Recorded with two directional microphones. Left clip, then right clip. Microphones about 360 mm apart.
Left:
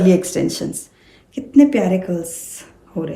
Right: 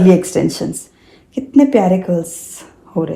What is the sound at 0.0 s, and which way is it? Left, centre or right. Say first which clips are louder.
A woman's voice: right 4 dB; centre.